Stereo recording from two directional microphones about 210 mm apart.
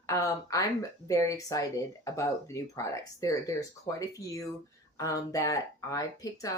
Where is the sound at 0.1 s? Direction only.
15° left (ahead or behind).